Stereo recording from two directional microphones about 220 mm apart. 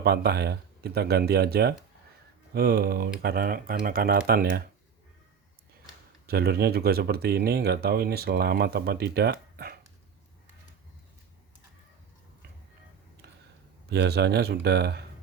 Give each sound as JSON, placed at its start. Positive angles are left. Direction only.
{"t": 0.0, "sound": "speech", "side_deg": -45}
{"t": 6.2, "sound": "speech", "side_deg": -45}
{"t": 13.8, "sound": "speech", "side_deg": -50}